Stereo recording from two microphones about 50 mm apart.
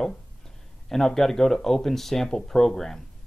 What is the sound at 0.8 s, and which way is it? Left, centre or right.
Speech, centre.